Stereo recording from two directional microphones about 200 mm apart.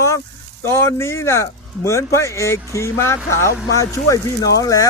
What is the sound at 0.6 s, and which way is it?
Speech, 15° left (ahead or behind).